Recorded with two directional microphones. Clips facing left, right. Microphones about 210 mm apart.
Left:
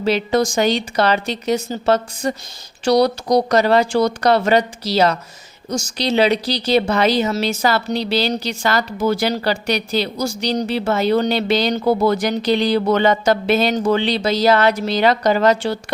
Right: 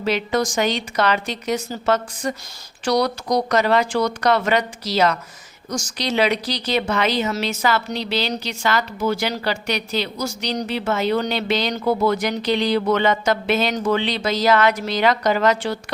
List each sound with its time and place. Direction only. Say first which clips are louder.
0.0 s speech: left 4 dB; 30° left (ahead or behind)